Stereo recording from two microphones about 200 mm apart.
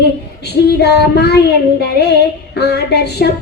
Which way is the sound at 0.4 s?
55° left (ahead or behind).